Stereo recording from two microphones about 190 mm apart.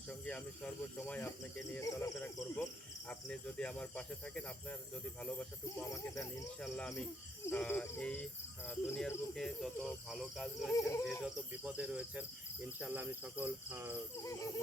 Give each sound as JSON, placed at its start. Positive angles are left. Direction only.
{"t": 0.1, "sound": "cricket", "side_deg": 5}
{"t": 6.6, "sound": "speech", "side_deg": 5}
{"t": 7.4, "sound": "cricket", "side_deg": 10}
{"t": 10.7, "sound": "cricket", "side_deg": 15}
{"t": 11.0, "sound": "cricket", "side_deg": 0}
{"t": 14.3, "sound": "cricket", "side_deg": 15}